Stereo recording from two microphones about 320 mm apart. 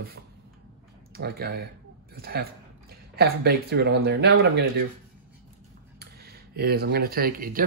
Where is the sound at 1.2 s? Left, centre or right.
Right.